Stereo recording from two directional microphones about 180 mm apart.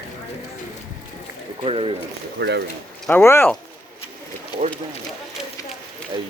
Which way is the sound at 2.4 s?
65° right (ahead or behind).